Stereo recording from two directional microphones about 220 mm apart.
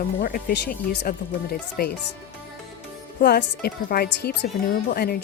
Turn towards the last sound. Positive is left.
turn(degrees=45)  # may be behind; listen again after turning